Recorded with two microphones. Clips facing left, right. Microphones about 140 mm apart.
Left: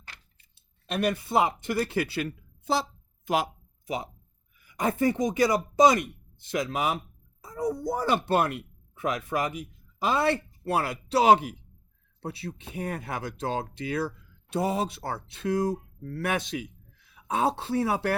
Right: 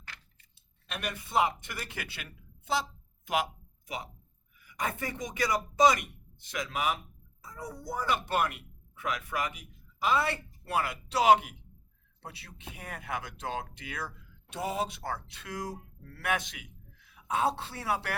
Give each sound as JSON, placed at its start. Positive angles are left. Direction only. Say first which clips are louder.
{"t": 0.9, "sound": "speech", "louder": "left 11 dB", "side_deg": 35}